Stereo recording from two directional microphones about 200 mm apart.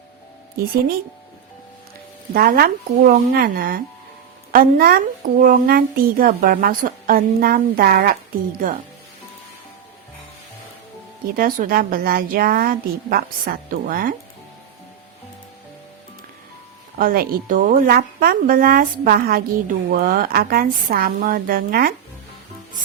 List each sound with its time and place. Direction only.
0.6 s speech: 50° right (ahead or behind)
2.3 s speech: 50° right (ahead or behind)
11.3 s speech: 45° right (ahead or behind)
17.0 s speech: 45° right (ahead or behind)